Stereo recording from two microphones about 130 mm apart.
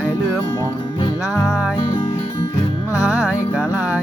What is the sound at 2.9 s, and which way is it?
Music, 10° right (ahead or behind).